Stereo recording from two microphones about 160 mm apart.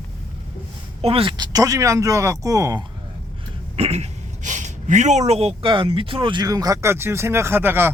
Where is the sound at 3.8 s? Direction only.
45° right (ahead or behind).